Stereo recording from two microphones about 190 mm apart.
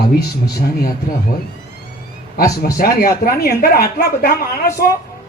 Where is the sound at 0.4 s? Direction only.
55° left (ahead or behind).